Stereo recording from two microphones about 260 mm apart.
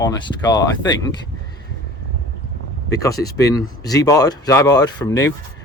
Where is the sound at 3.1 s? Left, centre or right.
Left.